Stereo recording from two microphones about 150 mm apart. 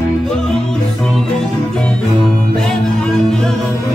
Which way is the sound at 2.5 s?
5° left (ahead or behind).